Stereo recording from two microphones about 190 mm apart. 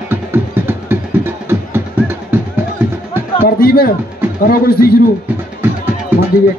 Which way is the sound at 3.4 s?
50° left (ahead or behind).